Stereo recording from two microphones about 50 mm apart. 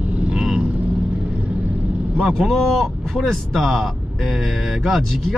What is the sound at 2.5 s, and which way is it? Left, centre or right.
Speech, centre.